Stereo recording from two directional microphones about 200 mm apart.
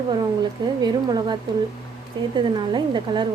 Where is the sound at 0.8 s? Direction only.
20° right (ahead or behind).